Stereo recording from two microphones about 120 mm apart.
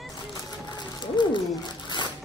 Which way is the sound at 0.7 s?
40° left (ahead or behind).